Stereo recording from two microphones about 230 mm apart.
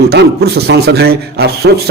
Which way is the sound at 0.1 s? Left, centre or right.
Right.